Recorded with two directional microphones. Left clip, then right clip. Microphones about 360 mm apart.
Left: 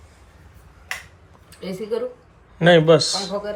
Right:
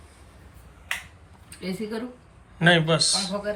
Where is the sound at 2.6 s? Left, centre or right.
Centre.